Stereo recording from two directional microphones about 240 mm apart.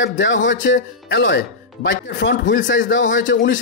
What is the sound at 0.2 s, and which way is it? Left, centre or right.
Speech, left.